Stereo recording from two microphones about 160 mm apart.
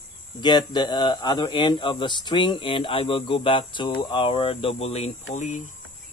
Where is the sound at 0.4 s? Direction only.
25° left (ahead or behind).